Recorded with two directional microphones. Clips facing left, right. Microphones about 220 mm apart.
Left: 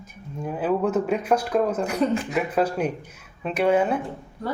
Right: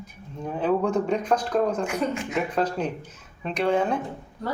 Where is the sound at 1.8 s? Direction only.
35° left (ahead or behind).